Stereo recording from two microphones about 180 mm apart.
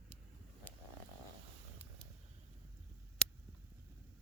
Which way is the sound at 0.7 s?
10° left (ahead or behind).